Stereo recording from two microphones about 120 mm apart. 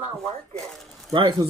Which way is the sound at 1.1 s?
40° right (ahead or behind).